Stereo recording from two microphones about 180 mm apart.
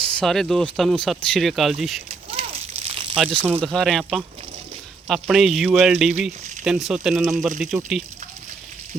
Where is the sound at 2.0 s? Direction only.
30° right (ahead or behind).